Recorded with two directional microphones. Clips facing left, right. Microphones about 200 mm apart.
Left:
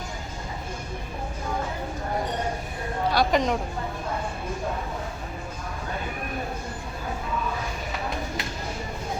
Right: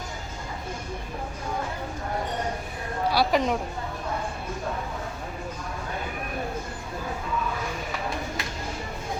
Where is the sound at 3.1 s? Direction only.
5° right (ahead or behind).